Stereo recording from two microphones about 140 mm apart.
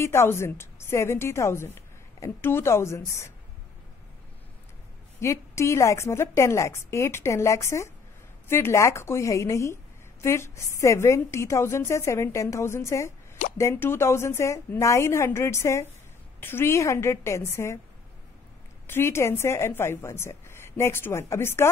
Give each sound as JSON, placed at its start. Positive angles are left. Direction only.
{"t": 0.0, "sound": "a woman's voice", "side_deg": 20}
{"t": 5.2, "sound": "a woman's voice", "side_deg": 20}
{"t": 18.9, "sound": "a woman's voice", "side_deg": 15}